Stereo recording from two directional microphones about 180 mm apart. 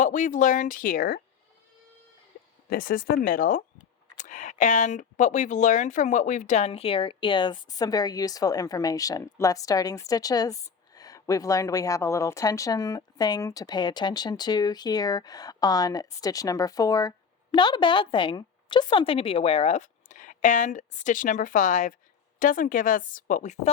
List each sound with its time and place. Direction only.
0.0 s a woman's voice: 45° left (ahead or behind)
2.6 s a woman's voice: 55° left (ahead or behind)